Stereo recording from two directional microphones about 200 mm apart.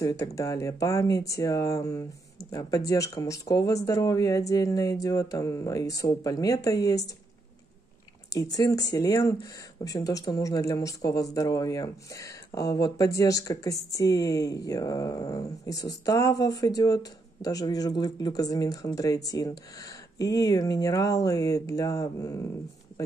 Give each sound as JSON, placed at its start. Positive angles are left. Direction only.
{"t": 0.0, "sound": "speech", "side_deg": 15}
{"t": 8.3, "sound": "speech", "side_deg": 20}